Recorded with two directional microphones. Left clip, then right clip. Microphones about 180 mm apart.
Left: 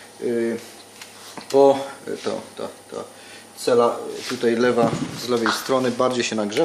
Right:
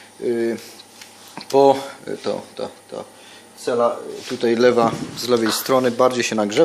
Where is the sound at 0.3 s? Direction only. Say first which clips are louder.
Right 2 dB; 45° right (ahead or behind).